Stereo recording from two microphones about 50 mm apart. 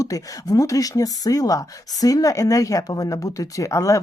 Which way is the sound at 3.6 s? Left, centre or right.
Left.